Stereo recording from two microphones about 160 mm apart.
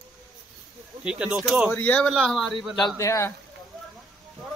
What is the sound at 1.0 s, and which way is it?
Speech, 5° right (ahead or behind).